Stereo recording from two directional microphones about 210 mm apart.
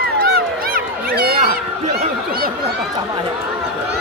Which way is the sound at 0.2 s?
45° right (ahead or behind).